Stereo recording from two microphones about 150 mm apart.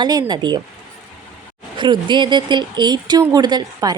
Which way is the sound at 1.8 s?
30° right (ahead or behind).